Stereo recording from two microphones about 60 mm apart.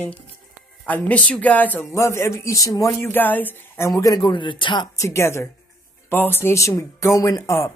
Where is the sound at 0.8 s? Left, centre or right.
Left.